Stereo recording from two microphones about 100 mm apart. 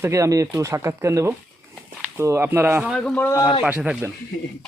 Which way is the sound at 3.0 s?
10° left (ahead or behind).